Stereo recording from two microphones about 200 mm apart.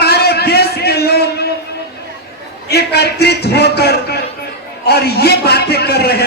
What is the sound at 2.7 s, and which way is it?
A man's voice, 55° left (ahead or behind).